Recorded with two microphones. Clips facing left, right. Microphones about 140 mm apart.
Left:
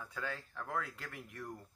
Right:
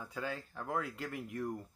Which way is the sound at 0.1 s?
30° right (ahead or behind).